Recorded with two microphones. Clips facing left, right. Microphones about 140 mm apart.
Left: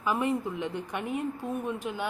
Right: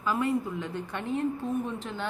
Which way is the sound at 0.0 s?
20° left (ahead or behind).